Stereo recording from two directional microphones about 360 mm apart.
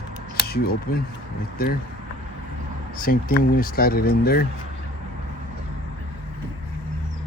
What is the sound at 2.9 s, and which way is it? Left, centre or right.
Speech, left.